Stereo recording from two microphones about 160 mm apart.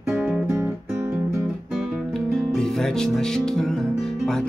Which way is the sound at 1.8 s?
Centre (ahead or behind).